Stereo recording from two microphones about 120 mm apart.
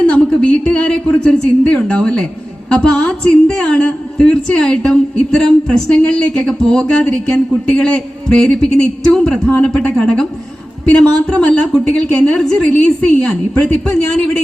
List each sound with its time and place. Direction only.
0.0 s a sound: 10° left (ahead or behind)
2.6 s a woman's voice: 5° left (ahead or behind)
11.3 s a woman's voice: 5° left (ahead or behind)